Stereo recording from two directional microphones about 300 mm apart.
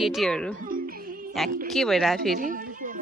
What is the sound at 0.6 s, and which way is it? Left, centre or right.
Music, right.